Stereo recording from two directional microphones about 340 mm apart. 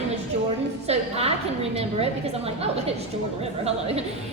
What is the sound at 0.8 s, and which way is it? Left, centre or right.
A woman's voice, centre.